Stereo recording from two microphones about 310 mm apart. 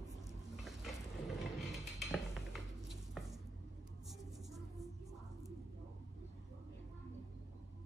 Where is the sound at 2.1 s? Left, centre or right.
Centre.